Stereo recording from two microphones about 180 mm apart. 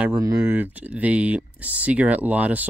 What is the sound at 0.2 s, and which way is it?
Speech, 10° right (ahead or behind).